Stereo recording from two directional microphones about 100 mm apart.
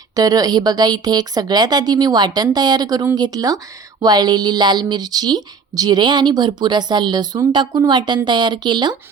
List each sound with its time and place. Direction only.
0.2 s a woman's voice: 40° right (ahead or behind)